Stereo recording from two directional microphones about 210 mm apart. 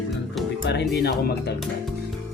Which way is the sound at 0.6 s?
55° left (ahead or behind).